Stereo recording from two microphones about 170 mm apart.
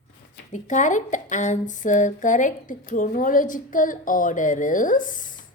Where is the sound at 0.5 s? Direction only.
45° left (ahead or behind).